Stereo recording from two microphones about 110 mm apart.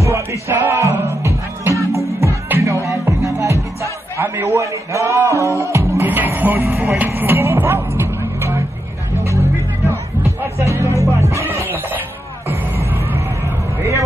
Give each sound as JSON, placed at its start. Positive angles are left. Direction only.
{"t": 0.0, "sound": "music", "side_deg": -25}